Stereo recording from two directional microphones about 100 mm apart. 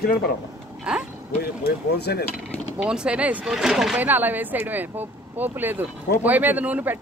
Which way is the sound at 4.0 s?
20° right (ahead or behind).